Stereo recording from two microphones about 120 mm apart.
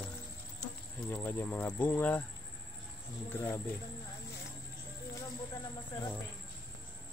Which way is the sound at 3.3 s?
20° left (ahead or behind).